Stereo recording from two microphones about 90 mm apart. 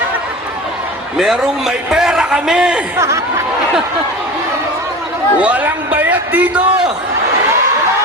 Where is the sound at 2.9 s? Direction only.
35° right (ahead or behind).